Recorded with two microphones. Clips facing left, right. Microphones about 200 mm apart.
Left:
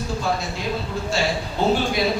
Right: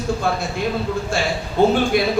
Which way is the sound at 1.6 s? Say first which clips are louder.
Right 5 dB; 50° right (ahead or behind).